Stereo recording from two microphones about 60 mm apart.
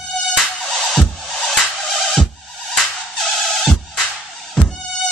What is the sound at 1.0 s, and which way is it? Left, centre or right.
Music, centre.